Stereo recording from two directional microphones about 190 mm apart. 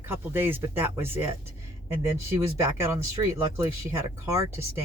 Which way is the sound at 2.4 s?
15° right (ahead or behind).